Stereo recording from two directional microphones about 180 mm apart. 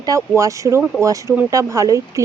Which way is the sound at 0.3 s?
15° right (ahead or behind).